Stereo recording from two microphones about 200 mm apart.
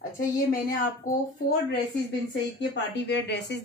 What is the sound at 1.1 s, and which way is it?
Speech, 15° left (ahead or behind).